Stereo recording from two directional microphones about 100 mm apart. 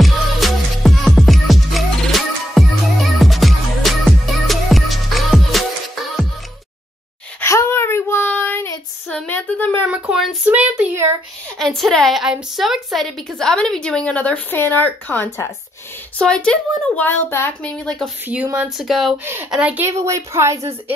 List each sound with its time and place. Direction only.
0.0 s music: centre (ahead or behind)
7.4 s a sound: 25° left (ahead or behind)
8.3 s child singing: 20° left (ahead or behind)
9.1 s a sound: 15° left (ahead or behind)
9.8 s a sound: 10° right (ahead or behind)
11.5 s a woman's voice: 5° left (ahead or behind); by 17.5 s 20° left (ahead or behind)
17.8 s speech: 5° left (ahead or behind)
19.5 s speech: 10° right (ahead or behind)
20.0 s a woman's voice: 30° right (ahead or behind)